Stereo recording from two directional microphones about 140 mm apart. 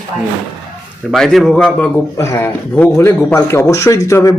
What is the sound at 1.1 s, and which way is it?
Speech, centre (ahead or behind).